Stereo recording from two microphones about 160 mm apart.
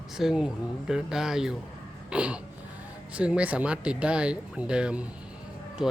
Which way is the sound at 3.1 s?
5° right (ahead or behind).